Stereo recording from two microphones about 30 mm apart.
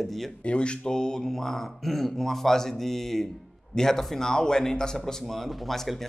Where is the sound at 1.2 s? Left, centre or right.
Centre.